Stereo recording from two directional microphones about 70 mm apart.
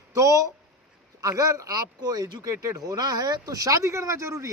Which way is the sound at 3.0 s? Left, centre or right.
Right.